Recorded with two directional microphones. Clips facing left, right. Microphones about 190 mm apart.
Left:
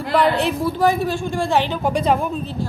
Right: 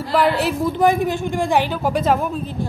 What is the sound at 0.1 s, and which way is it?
Speech, 5° right (ahead or behind).